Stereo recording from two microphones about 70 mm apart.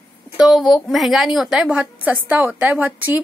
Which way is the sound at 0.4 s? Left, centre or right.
Centre.